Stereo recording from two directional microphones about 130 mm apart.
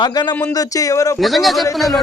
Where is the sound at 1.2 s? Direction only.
Centre (ahead or behind).